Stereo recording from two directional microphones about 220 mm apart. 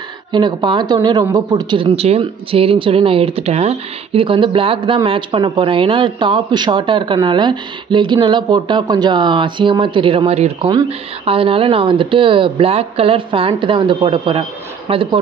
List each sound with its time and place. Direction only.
0.3 s speech: 20° right (ahead or behind)